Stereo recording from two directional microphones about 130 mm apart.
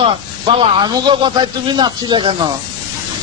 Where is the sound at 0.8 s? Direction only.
35° right (ahead or behind).